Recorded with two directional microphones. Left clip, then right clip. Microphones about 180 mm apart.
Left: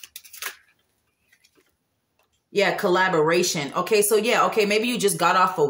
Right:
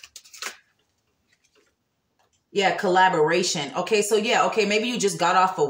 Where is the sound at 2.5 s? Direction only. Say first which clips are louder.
Right 1 dB; 20° left (ahead or behind).